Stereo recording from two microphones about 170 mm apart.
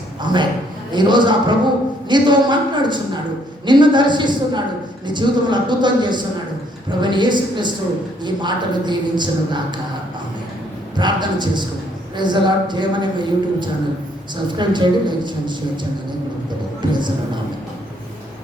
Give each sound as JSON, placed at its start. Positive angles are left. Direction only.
{"t": 0.3, "sound": "a woman's voice", "side_deg": -25}
{"t": 10.9, "sound": "a woman's voice", "side_deg": -25}